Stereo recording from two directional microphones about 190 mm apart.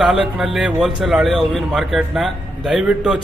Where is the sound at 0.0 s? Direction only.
Centre (ahead or behind).